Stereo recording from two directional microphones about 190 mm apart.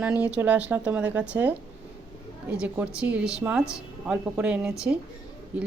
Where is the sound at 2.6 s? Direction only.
5° right (ahead or behind).